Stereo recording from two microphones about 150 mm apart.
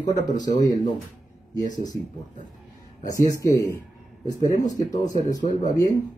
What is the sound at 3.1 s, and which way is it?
Speech, 20° left (ahead or behind).